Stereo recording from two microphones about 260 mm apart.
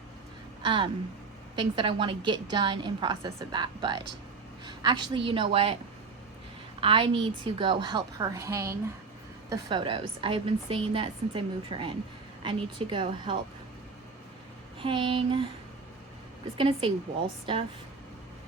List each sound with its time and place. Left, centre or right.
0.6 s a woman's voice: centre
6.8 s a woman's voice: centre
14.8 s a woman's voice: centre
16.6 s a woman's voice: centre